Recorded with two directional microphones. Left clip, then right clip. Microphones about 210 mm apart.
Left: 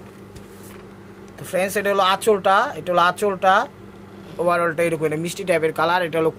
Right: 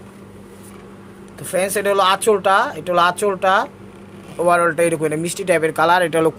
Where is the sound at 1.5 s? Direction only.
5° right (ahead or behind).